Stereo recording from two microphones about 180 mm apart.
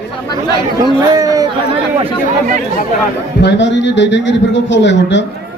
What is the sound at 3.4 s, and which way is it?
A man's voice, 75° left (ahead or behind).